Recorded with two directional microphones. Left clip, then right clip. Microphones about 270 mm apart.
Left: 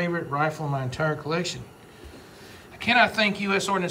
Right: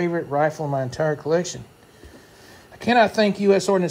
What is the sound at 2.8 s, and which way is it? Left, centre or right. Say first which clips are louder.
Speech: right 3 dB; centre.